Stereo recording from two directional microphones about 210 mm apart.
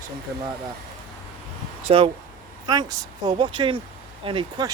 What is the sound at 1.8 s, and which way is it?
Speech, 25° right (ahead or behind).